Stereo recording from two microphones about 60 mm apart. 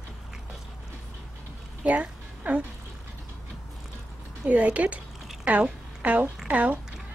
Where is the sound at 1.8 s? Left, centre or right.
Right.